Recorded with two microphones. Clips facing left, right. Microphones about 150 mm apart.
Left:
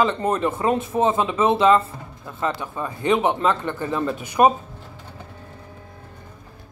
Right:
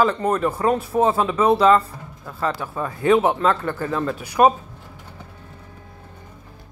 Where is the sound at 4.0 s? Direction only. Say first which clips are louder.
Even; 5° left (ahead or behind).